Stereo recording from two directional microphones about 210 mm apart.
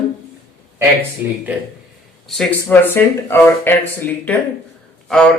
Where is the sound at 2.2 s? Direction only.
Centre (ahead or behind).